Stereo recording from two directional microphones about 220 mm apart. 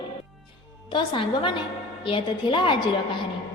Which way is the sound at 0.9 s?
20° left (ahead or behind).